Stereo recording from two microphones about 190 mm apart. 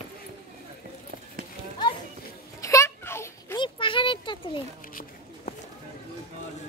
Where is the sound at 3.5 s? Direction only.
25° left (ahead or behind).